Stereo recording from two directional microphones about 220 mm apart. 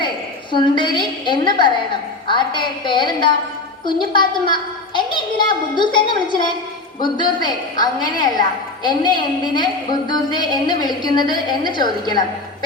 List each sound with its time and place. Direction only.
0.5 s a woman's voice: 20° left (ahead or behind)